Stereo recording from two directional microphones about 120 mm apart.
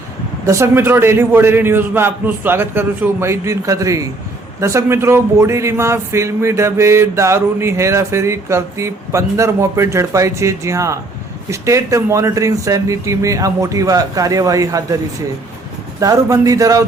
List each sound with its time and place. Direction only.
0.4 s speech: 20° right (ahead or behind)
16.0 s speech: 30° right (ahead or behind)